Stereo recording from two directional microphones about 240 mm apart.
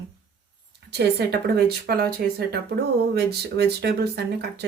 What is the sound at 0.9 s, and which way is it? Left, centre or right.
Speech, right.